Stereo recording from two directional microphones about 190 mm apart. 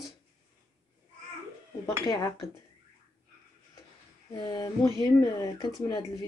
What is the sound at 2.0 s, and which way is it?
Speech, 20° left (ahead or behind).